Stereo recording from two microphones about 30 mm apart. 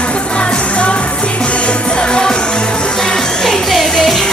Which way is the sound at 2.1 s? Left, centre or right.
Left.